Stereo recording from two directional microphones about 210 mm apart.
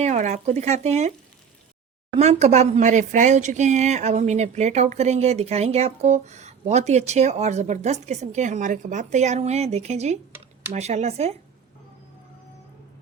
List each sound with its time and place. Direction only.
0.0 s speech: 35° right (ahead or behind)
2.1 s speech: 30° right (ahead or behind)